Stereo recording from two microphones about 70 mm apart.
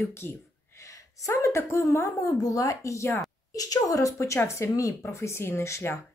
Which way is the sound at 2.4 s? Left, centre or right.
Left.